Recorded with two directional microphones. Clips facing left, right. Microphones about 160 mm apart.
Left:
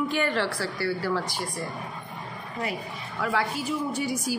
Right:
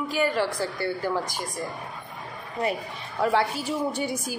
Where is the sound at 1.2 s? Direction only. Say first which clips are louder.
Even; 45° right (ahead or behind).